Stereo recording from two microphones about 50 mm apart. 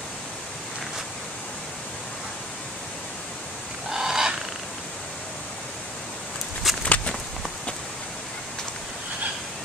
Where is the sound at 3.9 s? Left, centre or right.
Centre.